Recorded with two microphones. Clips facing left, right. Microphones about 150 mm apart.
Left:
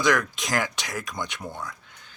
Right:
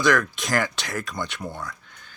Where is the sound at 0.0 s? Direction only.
20° left (ahead or behind).